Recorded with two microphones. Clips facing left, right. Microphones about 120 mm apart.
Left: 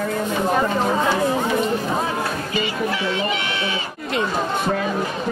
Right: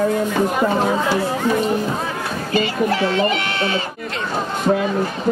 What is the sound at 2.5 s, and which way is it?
Speech, 45° right (ahead or behind).